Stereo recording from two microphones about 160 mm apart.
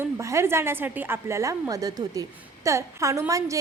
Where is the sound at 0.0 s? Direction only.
20° right (ahead or behind).